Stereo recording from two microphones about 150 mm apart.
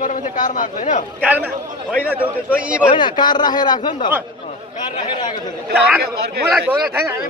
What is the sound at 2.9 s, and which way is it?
Speech, 30° left (ahead or behind).